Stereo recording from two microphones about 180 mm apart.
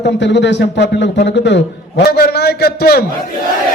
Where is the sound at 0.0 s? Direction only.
75° left (ahead or behind).